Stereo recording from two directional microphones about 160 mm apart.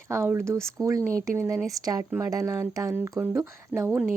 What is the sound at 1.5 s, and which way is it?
Speech, centre (ahead or behind).